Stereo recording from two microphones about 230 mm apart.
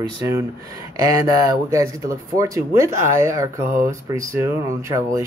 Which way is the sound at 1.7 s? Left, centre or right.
Centre.